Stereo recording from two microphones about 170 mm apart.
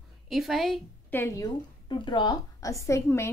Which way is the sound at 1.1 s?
15° left (ahead or behind).